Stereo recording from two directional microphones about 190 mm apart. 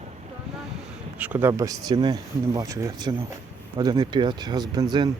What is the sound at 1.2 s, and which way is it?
Speech, 10° right (ahead or behind).